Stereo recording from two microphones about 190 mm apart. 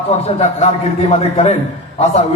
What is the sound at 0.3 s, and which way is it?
Speech, 35° left (ahead or behind).